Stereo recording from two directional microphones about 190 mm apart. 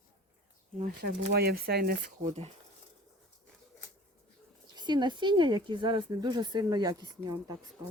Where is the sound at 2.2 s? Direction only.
35° right (ahead or behind).